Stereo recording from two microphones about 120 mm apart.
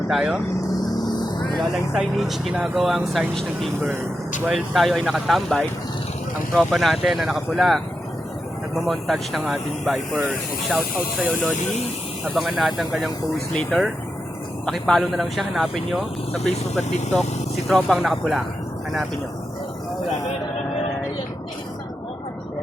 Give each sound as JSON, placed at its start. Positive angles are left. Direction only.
{"t": 0.1, "sound": "speech", "side_deg": -5}
{"t": 1.5, "sound": "speech", "side_deg": -5}
{"t": 6.7, "sound": "speech", "side_deg": 0}